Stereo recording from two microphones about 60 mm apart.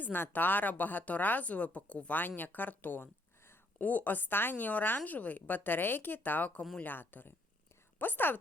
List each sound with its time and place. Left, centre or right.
0.0 s speech: left
3.8 s speech: left